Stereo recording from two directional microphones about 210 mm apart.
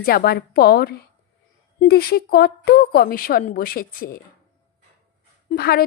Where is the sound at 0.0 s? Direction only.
45° left (ahead or behind).